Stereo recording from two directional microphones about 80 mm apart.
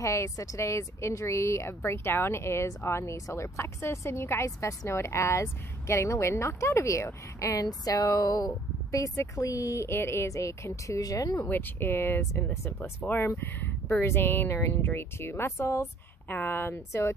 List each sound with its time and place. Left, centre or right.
0.0 s a woman's voice: left
7.4 s speech: left
11.4 s speech: left
13.9 s a woman's voice: left